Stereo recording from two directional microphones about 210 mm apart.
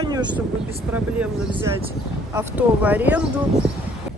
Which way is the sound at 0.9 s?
5° right (ahead or behind).